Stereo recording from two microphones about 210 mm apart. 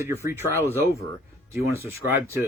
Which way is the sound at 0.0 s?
10° right (ahead or behind).